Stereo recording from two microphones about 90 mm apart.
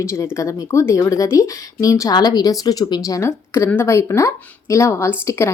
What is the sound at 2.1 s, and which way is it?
A woman's voice, 50° left (ahead or behind).